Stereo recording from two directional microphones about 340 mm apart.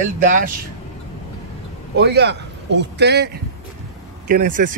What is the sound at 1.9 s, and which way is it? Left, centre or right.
A man's voice, right.